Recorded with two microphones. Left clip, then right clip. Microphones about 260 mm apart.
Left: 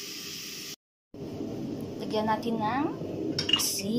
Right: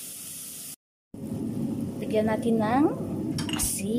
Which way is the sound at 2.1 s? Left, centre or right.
Centre.